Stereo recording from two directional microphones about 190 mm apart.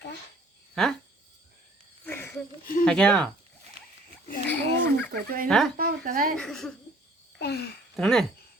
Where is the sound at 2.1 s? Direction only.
10° left (ahead or behind).